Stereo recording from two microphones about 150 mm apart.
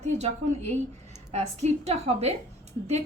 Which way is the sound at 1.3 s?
45° right (ahead or behind).